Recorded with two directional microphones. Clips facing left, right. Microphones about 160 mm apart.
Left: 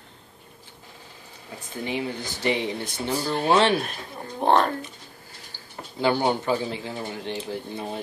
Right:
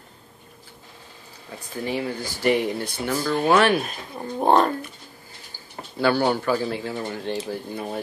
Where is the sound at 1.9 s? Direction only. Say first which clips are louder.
Right 2 dB; 20° left (ahead or behind).